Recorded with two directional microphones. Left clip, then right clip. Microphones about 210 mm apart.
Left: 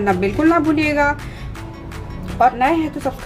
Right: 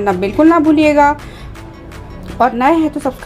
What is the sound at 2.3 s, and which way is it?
Speech, 30° right (ahead or behind).